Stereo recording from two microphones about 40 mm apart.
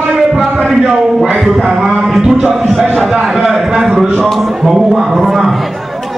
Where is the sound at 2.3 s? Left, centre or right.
Right.